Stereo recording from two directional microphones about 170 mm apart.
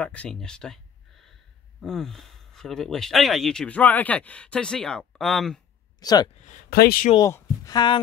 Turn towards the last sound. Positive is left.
turn(degrees=25)  # may be behind; listen again after turning